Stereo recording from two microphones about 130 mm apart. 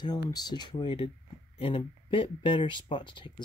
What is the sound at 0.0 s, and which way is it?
Speech, 30° left (ahead or behind).